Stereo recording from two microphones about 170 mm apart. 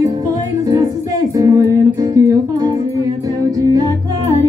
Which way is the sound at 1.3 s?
20° right (ahead or behind).